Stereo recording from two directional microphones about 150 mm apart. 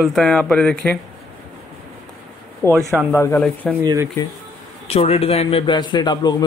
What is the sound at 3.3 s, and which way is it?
Speech, 5° left (ahead or behind).